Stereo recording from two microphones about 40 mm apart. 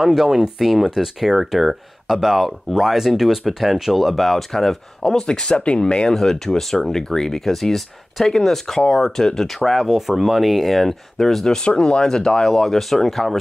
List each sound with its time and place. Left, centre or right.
0.0 s speech: centre
0.6 s speech: centre
5.0 s speech: centre
6.1 s speech: centre
9.8 s speech: centre
11.6 s speech: left
12.4 s speech: centre